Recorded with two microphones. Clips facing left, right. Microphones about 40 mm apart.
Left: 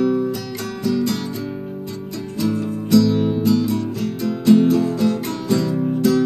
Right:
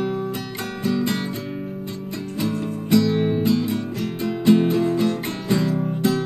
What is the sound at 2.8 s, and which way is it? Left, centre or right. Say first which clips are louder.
Music: left 3 dB; right.